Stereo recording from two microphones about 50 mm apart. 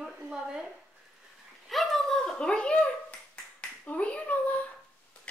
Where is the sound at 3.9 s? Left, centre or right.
Left.